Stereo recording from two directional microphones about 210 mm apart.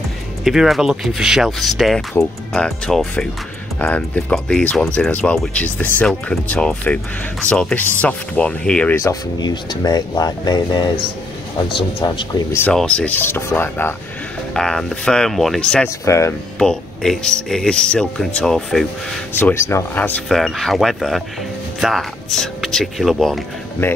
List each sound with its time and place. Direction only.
0.4 s speech: centre (ahead or behind); by 12.3 s 20° left (ahead or behind)
12.5 s speech: 5° left (ahead or behind)
16.5 s speech: centre (ahead or behind)
19.4 s speech: 15° left (ahead or behind)